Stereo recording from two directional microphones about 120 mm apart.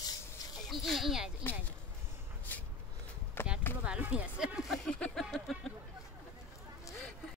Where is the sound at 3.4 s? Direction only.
20° left (ahead or behind).